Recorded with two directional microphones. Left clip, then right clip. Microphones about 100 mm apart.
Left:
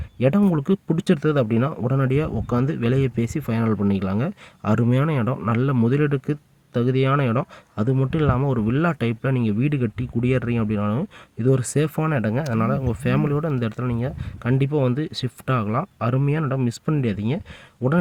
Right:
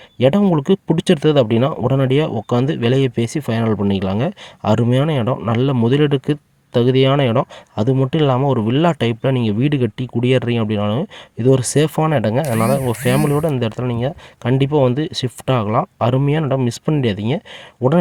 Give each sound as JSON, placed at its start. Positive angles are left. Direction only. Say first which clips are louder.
{"t": 0.2, "sound": "speech", "louder": "right 6 dB", "side_deg": -30}